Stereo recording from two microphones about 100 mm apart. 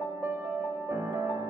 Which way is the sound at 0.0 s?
20° right (ahead or behind).